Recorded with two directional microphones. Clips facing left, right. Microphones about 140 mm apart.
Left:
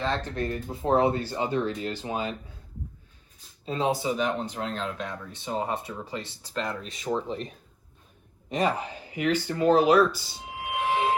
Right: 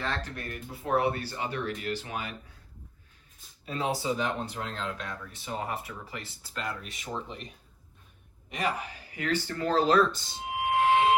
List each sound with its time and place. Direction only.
0.0 s speech: 25° left (ahead or behind)
3.7 s speech: 25° left (ahead or behind)
8.4 s speech: 30° left (ahead or behind); by 10.2 s 5° left (ahead or behind)